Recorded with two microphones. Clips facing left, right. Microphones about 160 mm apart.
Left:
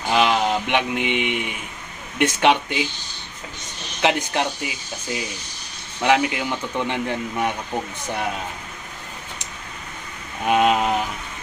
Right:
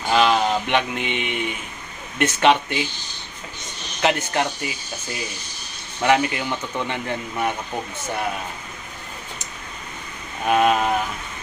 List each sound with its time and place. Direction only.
0.1 s speech: 15° left (ahead or behind)
4.0 s speech: 15° left (ahead or behind)
6.0 s speech: 15° left (ahead or behind)
10.4 s speech: 15° left (ahead or behind)